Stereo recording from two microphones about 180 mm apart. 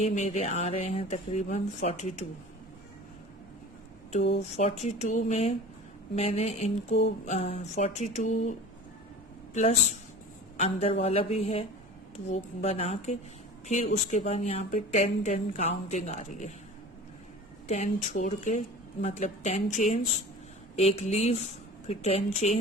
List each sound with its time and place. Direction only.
0.0 s speech: 45° left (ahead or behind)
4.2 s speech: 75° left (ahead or behind)
4.5 s speech: 40° left (ahead or behind)
10.6 s speech: 35° left (ahead or behind)
17.7 s speech: 45° left (ahead or behind)